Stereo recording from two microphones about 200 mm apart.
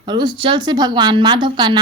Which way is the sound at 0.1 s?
20° right (ahead or behind).